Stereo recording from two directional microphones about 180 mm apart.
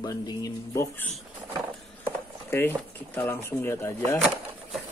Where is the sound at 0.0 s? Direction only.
20° left (ahead or behind).